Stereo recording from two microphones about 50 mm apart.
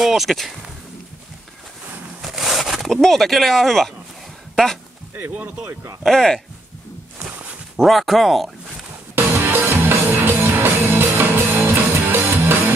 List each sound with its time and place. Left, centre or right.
0.0 s speech: centre
2.2 s a sound: centre
2.9 s speech: centre
6.0 s speech: centre
7.7 s speech: centre
9.1 s music: right